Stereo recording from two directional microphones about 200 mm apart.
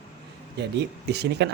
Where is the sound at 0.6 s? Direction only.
55° right (ahead or behind).